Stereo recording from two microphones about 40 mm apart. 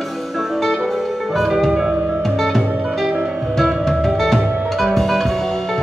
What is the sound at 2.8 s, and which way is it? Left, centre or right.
Music, centre.